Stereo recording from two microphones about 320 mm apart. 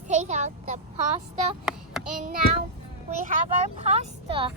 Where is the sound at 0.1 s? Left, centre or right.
Right.